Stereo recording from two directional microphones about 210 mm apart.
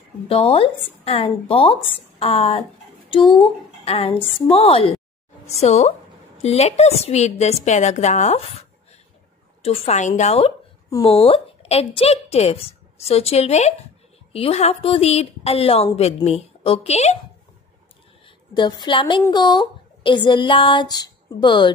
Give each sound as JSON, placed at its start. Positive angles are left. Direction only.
{"t": 0.3, "sound": "a woman's voice", "side_deg": 25}
{"t": 18.2, "sound": "a woman's voice", "side_deg": 20}